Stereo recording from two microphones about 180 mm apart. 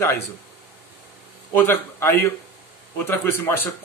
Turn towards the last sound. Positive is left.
turn(degrees=10)  # may be behind; listen again after turning